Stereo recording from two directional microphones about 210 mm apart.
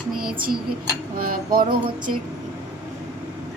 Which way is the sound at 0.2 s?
45° right (ahead or behind).